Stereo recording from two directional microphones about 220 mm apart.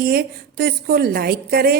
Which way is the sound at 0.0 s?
45° right (ahead or behind).